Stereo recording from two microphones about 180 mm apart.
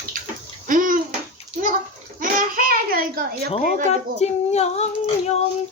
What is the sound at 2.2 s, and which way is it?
Child singing, 50° right (ahead or behind).